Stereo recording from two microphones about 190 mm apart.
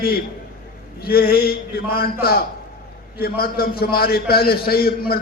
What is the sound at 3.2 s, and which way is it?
A man's voice, 55° left (ahead or behind).